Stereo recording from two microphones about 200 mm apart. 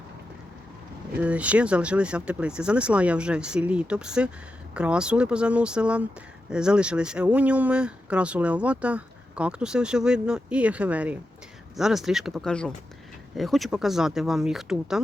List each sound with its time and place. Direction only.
1.2 s speech: 5° right (ahead or behind)